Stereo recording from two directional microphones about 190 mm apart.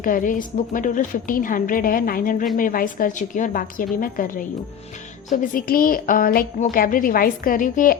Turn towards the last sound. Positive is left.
turn(degrees=45)  # may be behind; listen again after turning